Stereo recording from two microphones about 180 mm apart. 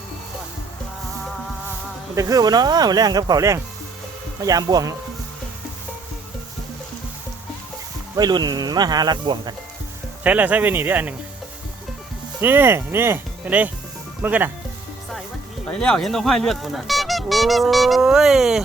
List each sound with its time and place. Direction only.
2.1 s speech: 20° right (ahead or behind)
8.1 s speech: 20° right (ahead or behind)
10.2 s speech: 10° right (ahead or behind)
12.4 s speech: 10° right (ahead or behind)
15.6 s speech: 5° left (ahead or behind)